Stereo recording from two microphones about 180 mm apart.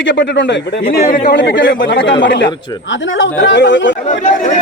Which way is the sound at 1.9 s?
85° left.